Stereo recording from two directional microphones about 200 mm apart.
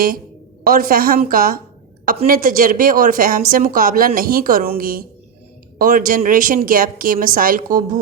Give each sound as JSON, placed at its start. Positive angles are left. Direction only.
{"t": 0.6, "sound": "a woman's voice", "side_deg": -45}